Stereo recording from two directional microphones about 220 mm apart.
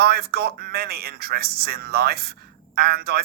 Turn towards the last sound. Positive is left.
turn(degrees=-45)  # may be behind; listen again after turning